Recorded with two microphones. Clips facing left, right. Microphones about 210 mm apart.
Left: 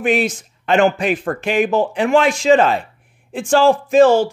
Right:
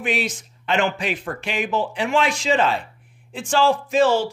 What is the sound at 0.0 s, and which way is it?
A man's voice, 50° left (ahead or behind).